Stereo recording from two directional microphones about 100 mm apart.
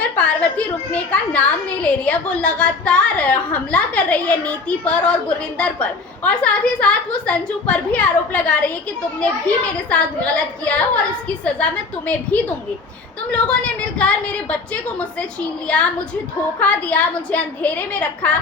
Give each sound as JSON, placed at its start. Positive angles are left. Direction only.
{"t": 0.0, "sound": "a woman's voice", "side_deg": 15}